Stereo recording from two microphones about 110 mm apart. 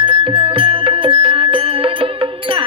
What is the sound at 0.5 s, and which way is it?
Music, 55° right (ahead or behind).